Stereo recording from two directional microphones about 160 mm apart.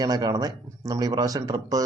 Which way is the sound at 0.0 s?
25° right (ahead or behind).